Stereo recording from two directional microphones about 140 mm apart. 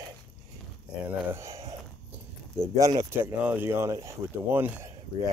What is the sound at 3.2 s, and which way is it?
Speech, 10° right (ahead or behind).